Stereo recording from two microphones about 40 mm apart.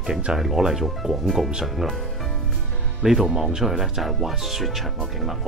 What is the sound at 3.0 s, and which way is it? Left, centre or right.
Speech, centre.